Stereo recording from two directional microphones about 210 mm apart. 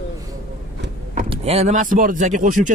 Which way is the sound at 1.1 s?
30° right (ahead or behind).